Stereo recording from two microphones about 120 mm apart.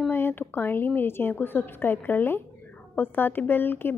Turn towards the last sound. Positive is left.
turn(degrees=20)  # may be behind; listen again after turning